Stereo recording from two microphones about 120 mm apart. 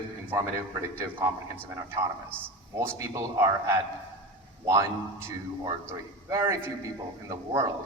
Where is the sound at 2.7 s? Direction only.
25° right (ahead or behind).